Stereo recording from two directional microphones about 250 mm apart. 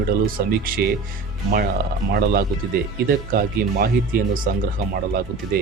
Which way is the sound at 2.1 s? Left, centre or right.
Right.